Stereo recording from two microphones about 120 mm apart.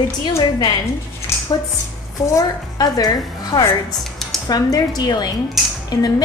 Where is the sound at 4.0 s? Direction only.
Centre (ahead or behind).